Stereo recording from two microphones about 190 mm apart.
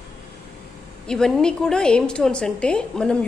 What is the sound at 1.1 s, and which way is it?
A woman's voice, 5° left (ahead or behind).